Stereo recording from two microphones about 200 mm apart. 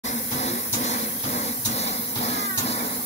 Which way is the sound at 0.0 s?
35° left (ahead or behind).